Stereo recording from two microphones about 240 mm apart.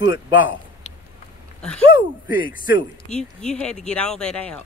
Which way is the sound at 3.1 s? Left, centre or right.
Centre.